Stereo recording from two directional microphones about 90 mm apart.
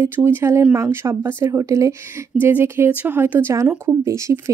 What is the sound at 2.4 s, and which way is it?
Speech, 25° right (ahead or behind).